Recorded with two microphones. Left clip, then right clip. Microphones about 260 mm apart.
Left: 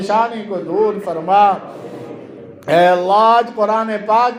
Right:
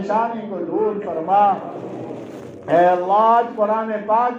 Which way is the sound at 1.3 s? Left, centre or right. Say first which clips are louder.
Left 4 dB; left.